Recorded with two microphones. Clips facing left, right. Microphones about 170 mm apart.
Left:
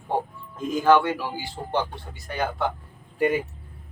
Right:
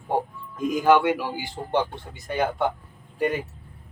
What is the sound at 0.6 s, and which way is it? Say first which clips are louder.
Speech: even; 10° right (ahead or behind).